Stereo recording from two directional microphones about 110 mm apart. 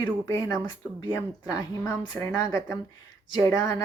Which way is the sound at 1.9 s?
35° left (ahead or behind).